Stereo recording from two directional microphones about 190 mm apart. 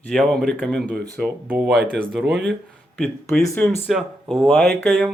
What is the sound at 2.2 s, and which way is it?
Speech, 60° right (ahead or behind).